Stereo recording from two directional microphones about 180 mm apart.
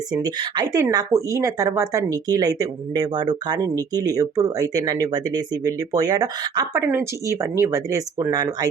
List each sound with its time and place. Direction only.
0.1 s speech: 20° right (ahead or behind)